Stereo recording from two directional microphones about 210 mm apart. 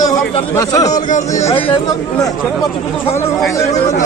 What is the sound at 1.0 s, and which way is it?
Speech, 35° left (ahead or behind).